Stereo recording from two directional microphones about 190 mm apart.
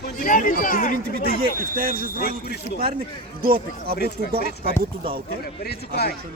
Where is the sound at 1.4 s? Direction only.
50° right (ahead or behind).